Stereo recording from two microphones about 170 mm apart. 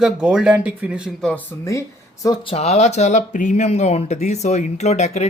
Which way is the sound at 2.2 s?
35° left (ahead or behind).